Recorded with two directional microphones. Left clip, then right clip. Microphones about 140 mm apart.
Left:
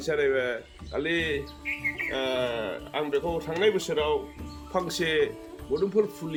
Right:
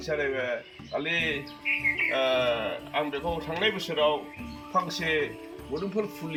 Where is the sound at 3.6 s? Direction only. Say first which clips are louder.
Left 1 dB; 20° left (ahead or behind).